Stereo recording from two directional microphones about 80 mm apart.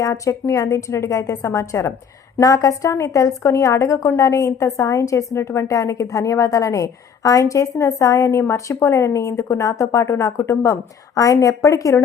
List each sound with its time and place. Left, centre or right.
0.0 s a woman's voice: left